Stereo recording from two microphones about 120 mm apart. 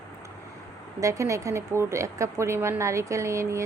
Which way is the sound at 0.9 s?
25° right (ahead or behind).